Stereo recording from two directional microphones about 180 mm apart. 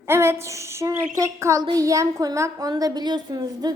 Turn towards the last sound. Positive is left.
turn(degrees=-20)  # may be behind; listen again after turning